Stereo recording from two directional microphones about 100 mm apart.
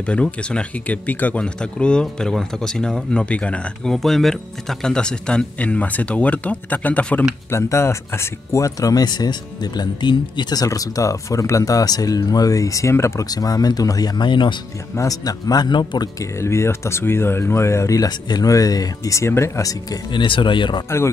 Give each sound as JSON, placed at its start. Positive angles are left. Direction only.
{"t": 0.0, "sound": "speech", "side_deg": 10}
{"t": 7.5, "sound": "speech", "side_deg": 30}
{"t": 13.3, "sound": "speech", "side_deg": 40}
{"t": 15.0, "sound": "speech", "side_deg": 35}
{"t": 16.3, "sound": "speech", "side_deg": 25}
{"t": 20.1, "sound": "speech", "side_deg": 55}